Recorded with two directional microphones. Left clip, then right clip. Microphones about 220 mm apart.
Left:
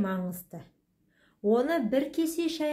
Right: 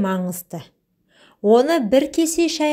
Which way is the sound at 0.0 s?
35° right (ahead or behind).